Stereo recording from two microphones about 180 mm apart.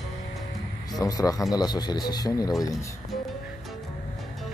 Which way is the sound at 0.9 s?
20° left (ahead or behind).